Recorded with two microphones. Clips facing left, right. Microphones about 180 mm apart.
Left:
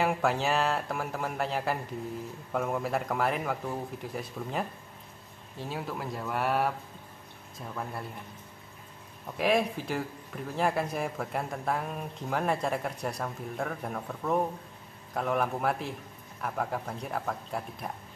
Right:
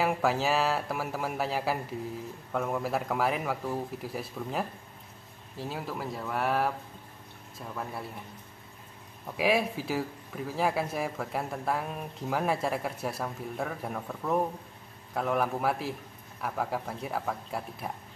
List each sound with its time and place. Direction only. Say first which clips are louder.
0.0 s speech: even; centre (ahead or behind)
9.4 s speech: even; 5° right (ahead or behind)